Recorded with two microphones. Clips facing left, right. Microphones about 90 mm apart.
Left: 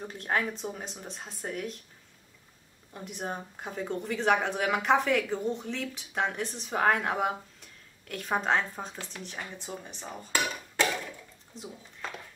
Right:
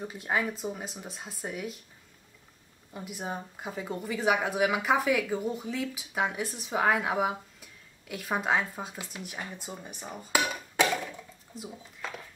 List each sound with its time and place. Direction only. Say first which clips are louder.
0.0 s speech: even; 5° right (ahead or behind)
2.9 s speech: even; 5° right (ahead or behind)